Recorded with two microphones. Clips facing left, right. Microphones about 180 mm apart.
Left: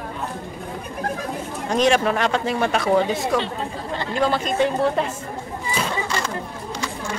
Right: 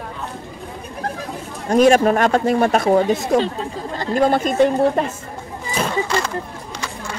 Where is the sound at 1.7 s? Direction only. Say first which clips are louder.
Right 6 dB; 45° right (ahead or behind).